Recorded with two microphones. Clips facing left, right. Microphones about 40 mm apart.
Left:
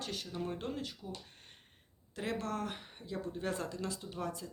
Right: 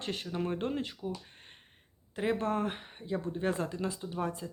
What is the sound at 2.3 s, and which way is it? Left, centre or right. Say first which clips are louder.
Speech: right 4 dB; right.